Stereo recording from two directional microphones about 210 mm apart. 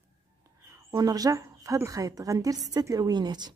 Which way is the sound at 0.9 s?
15° right (ahead or behind).